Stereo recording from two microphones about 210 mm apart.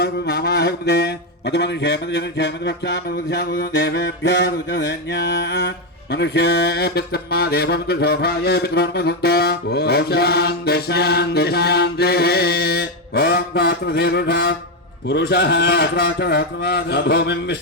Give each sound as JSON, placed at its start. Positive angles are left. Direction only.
{"t": 0.0, "sound": "mantra", "side_deg": 50}